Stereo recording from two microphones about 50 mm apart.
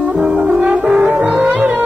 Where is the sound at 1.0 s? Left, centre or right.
Right.